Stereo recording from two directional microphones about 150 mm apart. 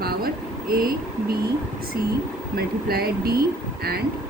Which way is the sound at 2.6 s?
90° right.